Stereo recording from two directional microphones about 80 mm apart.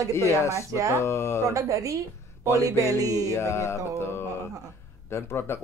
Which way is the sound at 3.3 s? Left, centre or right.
Left.